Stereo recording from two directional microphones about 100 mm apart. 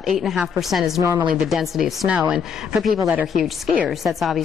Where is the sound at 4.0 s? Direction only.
Centre (ahead or behind).